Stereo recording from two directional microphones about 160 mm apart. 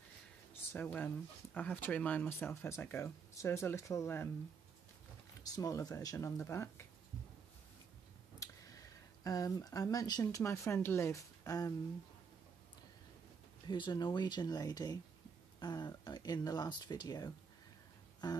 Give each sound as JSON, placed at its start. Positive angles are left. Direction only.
{"t": 0.7, "sound": "speech", "side_deg": 10}
{"t": 5.4, "sound": "speech", "side_deg": 20}
{"t": 8.4, "sound": "a sound", "side_deg": 20}
{"t": 9.2, "sound": "speech", "side_deg": 20}
{"t": 13.7, "sound": "speech", "side_deg": 25}